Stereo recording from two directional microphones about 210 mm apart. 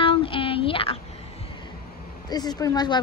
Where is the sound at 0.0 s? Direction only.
25° left (ahead or behind).